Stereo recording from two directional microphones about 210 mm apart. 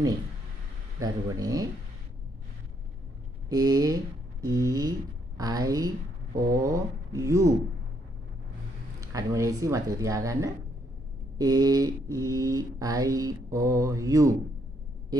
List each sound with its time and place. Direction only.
0.9 s mantra: 15° right (ahead or behind)
3.4 s speech: 15° right (ahead or behind)
5.4 s mantra: 15° right (ahead or behind)
9.0 s mantra: 15° right (ahead or behind)